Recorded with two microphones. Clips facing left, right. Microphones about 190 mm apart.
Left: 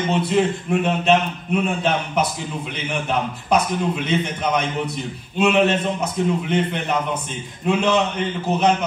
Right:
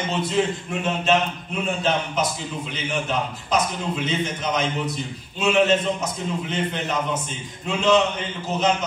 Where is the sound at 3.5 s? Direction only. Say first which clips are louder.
Left 4 dB; 60° left (ahead or behind).